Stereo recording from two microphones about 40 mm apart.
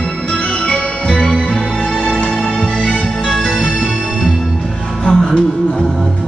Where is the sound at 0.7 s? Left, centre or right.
Left.